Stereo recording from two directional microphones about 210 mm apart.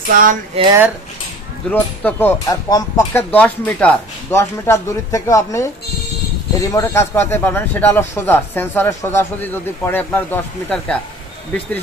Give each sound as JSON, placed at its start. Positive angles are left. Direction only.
{"t": 0.1, "sound": "music", "side_deg": -40}
{"t": 0.6, "sound": "speech", "side_deg": -30}
{"t": 1.7, "sound": "speech", "side_deg": 10}
{"t": 6.7, "sound": "speech", "side_deg": 15}